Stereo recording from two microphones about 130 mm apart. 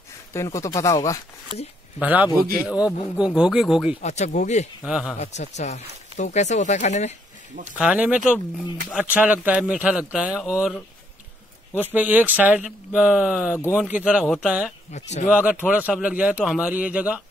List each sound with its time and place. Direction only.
0.3 s speech: 20° left (ahead or behind)
2.0 s a man's voice: 10° right (ahead or behind)
4.0 s speech: 60° left (ahead or behind)
4.8 s a man's voice: 5° right (ahead or behind)
5.2 s speech: 60° left (ahead or behind)
7.8 s a man's voice: 10° right (ahead or behind)
11.9 s a man's voice: 15° right (ahead or behind)
13.6 s speech: 20° left (ahead or behind)
13.8 s a man's voice: 10° right (ahead or behind)
14.9 s speech: 60° left (ahead or behind)
15.6 s a man's voice: 10° right (ahead or behind)